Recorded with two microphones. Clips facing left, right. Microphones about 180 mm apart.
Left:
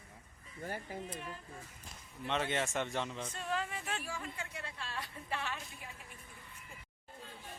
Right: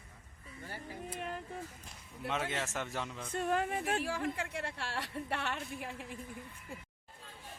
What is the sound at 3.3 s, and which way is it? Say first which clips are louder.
Speech: right 6 dB; 55° right (ahead or behind).